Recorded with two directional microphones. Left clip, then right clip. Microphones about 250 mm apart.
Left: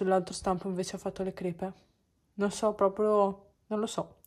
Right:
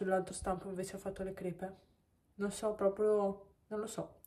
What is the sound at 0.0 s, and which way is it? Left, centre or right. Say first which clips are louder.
Speech: left 7 dB; centre.